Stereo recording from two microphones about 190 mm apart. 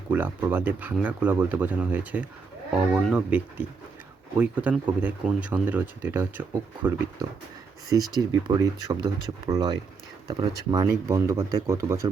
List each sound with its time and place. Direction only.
0.1 s speech: 10° right (ahead or behind)